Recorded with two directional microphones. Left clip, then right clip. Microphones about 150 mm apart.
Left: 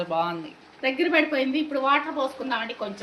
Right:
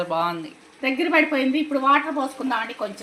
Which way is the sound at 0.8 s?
55° right (ahead or behind).